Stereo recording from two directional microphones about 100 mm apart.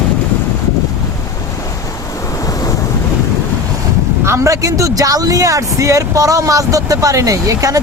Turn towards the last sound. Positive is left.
turn(degrees=-35)  # may be behind; listen again after turning